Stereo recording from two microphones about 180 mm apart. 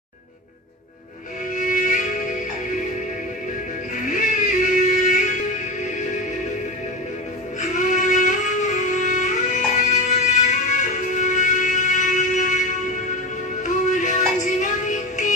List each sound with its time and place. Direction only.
1.5 s music: 45° left (ahead or behind)
4.1 s music: 45° left (ahead or behind)
7.7 s music: 45° left (ahead or behind)
13.9 s music: 45° left (ahead or behind)